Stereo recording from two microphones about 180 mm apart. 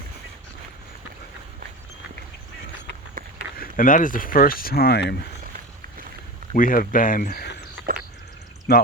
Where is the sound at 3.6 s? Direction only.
50° left (ahead or behind).